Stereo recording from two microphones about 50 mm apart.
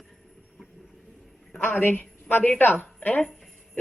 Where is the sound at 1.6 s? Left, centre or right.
Left.